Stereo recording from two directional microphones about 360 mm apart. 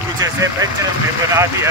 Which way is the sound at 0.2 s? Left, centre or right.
Centre.